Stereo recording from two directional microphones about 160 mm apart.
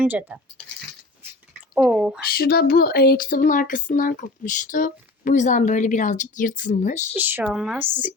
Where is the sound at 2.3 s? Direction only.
70° left (ahead or behind); by 7.0 s 50° left (ahead or behind).